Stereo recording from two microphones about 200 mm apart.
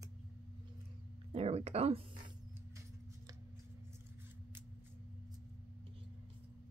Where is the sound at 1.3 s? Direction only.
30° right (ahead or behind).